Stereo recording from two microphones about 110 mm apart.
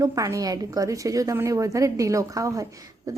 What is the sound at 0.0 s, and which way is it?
A woman's voice, 30° right (ahead or behind).